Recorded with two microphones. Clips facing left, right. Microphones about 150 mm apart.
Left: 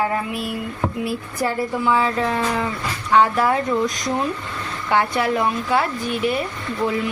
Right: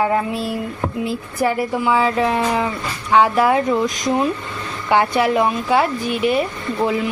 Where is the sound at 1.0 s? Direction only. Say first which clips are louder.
Right 6 dB; 20° right (ahead or behind).